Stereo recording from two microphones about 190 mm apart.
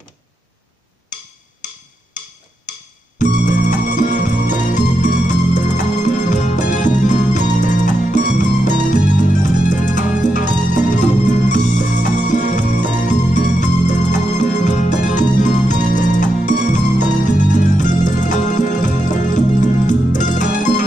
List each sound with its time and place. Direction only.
3.2 s music: 40° left (ahead or behind)